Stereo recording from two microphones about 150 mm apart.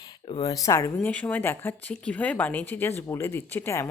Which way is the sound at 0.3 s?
25° left (ahead or behind).